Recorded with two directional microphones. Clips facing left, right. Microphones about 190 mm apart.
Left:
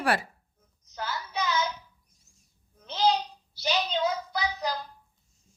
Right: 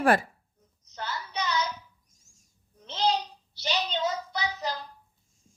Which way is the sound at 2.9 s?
Centre (ahead or behind).